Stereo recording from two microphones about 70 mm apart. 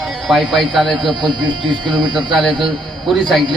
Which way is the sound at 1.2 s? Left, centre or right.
Right.